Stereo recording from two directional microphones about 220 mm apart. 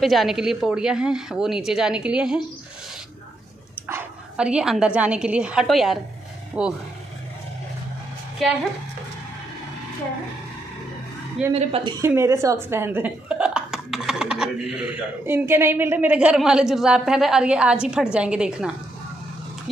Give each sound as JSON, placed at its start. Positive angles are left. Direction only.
{"t": 0.0, "sound": "speech", "side_deg": 0}
{"t": 3.8, "sound": "speech", "side_deg": -5}
{"t": 11.5, "sound": "a woman's voice", "side_deg": -25}